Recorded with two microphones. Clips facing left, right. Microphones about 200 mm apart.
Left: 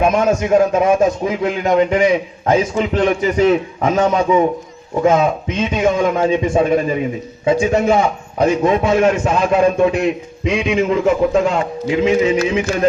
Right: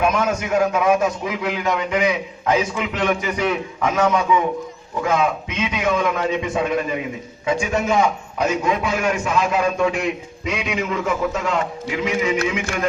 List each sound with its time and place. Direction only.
0.0 s a man's voice: 30° left (ahead or behind)